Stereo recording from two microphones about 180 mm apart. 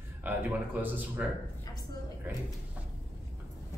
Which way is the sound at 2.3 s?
10° right (ahead or behind).